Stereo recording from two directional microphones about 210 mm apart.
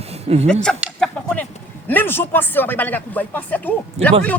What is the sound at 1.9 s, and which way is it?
A man's voice, 10° left (ahead or behind).